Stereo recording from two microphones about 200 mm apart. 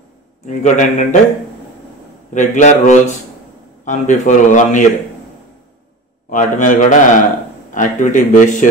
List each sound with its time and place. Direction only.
0.5 s a man's voice: 35° left (ahead or behind)
2.3 s a man's voice: 35° left (ahead or behind)
6.3 s a man's voice: 40° left (ahead or behind)